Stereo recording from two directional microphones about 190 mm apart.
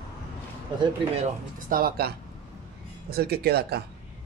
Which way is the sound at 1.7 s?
50° right (ahead or behind).